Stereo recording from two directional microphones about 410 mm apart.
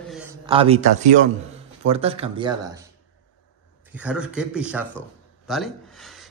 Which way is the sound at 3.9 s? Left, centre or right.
Centre.